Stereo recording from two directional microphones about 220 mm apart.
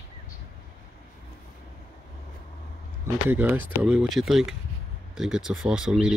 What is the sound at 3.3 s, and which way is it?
Speech, 10° right (ahead or behind).